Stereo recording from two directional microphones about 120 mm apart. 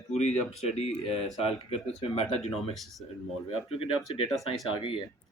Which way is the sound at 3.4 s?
55° left (ahead or behind).